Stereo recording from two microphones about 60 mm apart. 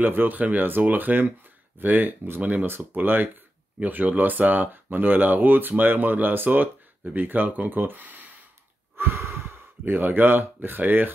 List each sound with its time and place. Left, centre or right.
0.0 s speech: right
8.9 s a sound: right
9.8 s speech: right